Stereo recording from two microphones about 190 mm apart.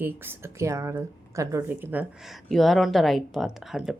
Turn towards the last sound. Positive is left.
turn(degrees=0)  # may be behind; listen again after turning